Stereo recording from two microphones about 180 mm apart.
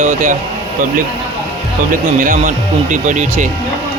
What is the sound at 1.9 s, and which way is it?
Speech, 45° right (ahead or behind).